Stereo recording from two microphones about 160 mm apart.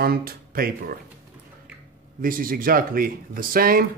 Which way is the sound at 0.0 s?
70° right (ahead or behind).